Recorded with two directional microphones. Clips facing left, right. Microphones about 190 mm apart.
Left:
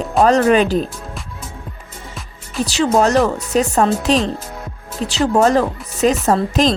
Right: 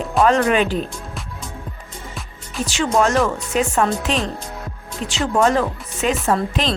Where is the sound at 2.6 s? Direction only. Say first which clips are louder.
Left 3 dB; 35° left (ahead or behind).